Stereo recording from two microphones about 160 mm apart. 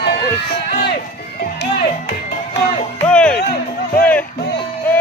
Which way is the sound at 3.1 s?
5° left (ahead or behind).